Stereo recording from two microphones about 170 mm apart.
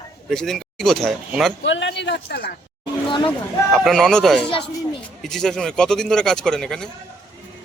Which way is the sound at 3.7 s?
Centre (ahead or behind).